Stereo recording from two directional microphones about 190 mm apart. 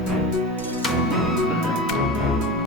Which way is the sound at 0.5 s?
10° left (ahead or behind).